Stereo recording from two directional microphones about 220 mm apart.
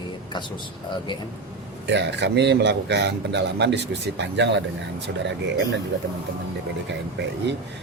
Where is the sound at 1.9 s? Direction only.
50° right (ahead or behind).